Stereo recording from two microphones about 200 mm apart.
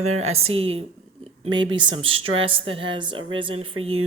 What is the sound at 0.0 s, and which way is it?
Speech, 90° right.